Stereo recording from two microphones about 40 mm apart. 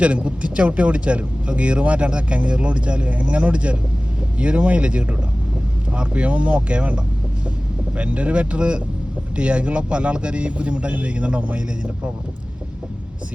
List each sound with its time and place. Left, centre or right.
0.0 s speech: right